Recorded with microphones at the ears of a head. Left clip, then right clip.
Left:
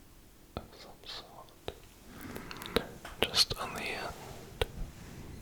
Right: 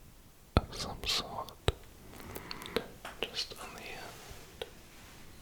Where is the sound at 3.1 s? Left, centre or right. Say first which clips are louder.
Left 10 dB; left.